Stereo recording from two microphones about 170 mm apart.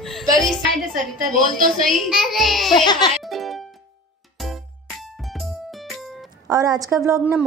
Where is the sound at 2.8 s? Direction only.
25° left (ahead or behind).